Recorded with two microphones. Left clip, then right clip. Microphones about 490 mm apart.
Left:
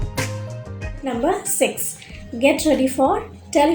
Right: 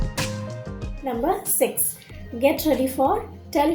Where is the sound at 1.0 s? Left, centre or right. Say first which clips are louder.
Left 3 dB; right.